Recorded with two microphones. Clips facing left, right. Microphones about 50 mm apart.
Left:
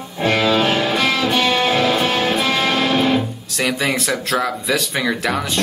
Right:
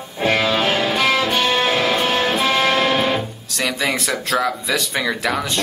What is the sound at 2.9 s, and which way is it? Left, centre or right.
Music, right.